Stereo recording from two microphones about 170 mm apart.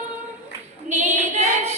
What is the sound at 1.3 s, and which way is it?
Singing, 40° right (ahead or behind).